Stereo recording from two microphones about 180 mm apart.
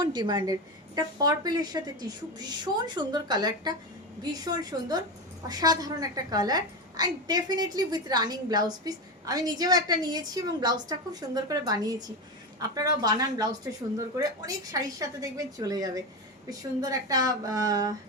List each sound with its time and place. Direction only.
0.0 s a woman's voice: 25° right (ahead or behind)